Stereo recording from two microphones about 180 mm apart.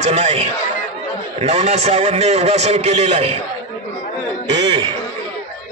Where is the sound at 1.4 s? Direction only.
40° right (ahead or behind).